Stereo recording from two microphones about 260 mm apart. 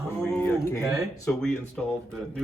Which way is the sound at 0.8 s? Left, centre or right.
Centre.